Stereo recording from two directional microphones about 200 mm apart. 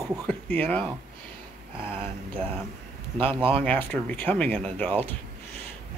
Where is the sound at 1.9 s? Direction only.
30° right (ahead or behind).